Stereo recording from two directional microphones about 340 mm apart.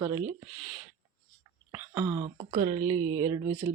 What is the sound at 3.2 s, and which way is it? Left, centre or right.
Speech, centre.